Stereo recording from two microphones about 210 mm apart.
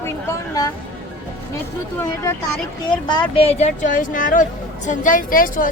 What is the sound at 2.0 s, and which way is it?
A woman's voice, 15° left (ahead or behind).